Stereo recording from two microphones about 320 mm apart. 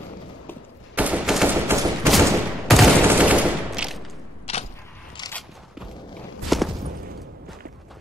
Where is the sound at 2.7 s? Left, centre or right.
Centre.